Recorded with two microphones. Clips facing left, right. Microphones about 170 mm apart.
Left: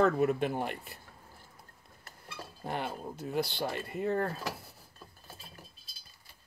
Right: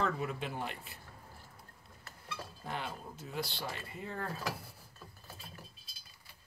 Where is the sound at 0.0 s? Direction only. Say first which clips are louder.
Left 9 dB; 55° left (ahead or behind).